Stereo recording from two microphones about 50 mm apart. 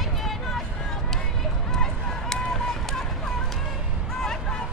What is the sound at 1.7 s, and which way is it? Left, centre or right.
Run, centre.